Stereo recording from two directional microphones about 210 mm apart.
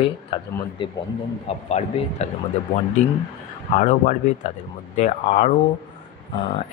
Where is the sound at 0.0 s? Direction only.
25° left (ahead or behind).